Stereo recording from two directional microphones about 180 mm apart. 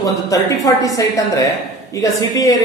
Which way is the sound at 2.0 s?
20° left (ahead or behind).